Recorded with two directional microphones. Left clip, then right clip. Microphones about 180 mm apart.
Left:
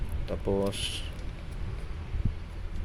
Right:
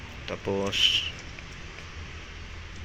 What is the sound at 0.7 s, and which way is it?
Speech, 10° left (ahead or behind).